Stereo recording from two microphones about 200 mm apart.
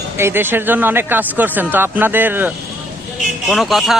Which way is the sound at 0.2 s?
10° right (ahead or behind).